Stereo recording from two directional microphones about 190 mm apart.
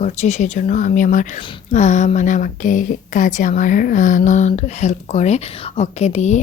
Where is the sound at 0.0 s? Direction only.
35° left (ahead or behind).